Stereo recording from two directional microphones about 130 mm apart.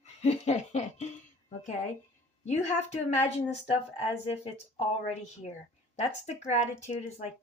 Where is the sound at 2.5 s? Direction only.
60° left (ahead or behind).